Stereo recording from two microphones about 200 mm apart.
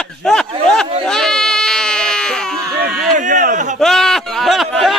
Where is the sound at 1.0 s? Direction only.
5° left (ahead or behind).